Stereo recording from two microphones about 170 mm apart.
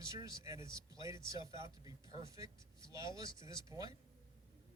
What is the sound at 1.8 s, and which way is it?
Speech, 20° right (ahead or behind).